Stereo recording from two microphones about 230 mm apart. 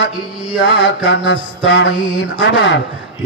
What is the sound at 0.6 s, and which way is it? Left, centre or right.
Mantra, left.